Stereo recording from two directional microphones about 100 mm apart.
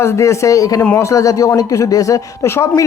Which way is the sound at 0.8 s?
25° left (ahead or behind).